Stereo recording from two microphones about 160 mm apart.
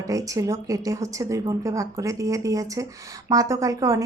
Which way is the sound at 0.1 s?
20° right (ahead or behind).